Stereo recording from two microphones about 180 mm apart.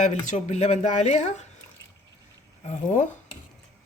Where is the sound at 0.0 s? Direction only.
40° left (ahead or behind).